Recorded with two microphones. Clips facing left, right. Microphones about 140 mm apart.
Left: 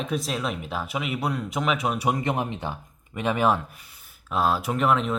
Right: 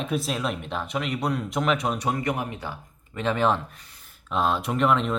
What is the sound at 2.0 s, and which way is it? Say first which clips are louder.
Speech: left 2 dB; 20° left (ahead or behind).